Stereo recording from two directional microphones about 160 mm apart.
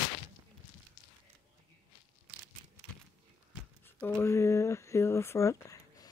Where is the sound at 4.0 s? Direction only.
15° left (ahead or behind).